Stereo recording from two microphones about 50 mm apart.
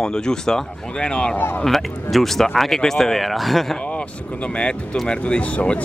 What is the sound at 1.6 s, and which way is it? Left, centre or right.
Speech, centre.